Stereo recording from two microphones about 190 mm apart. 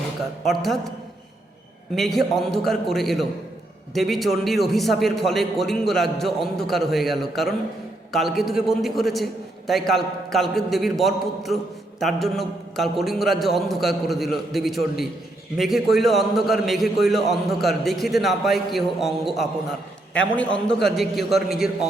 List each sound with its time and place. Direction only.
0.4 s a man's voice: centre (ahead or behind)
2.0 s a man's voice: centre (ahead or behind)